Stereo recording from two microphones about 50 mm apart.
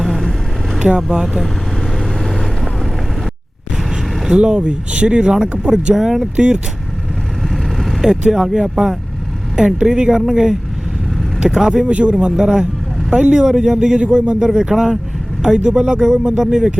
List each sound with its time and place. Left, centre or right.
0.0 s vehicle: centre
0.9 s speech: centre
2.0 s vehicle: centre
4.3 s speech: centre
7.5 s vehicle: centre
9.6 s speech: centre
11.9 s speech: right
12.1 s speech: centre